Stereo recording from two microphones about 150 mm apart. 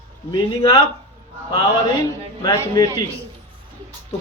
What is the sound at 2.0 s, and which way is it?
Speech, 20° left (ahead or behind).